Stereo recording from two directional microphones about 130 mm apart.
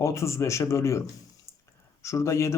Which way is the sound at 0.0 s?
20° left (ahead or behind).